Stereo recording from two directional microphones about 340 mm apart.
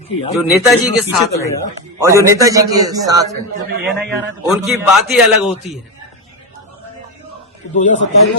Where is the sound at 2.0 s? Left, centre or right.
Centre.